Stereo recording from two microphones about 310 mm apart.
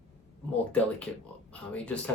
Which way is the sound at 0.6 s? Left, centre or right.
Centre.